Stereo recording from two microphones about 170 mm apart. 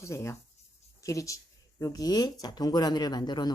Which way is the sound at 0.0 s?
15° left (ahead or behind).